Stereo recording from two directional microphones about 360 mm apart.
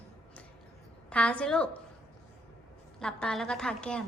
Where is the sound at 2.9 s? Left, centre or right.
Centre.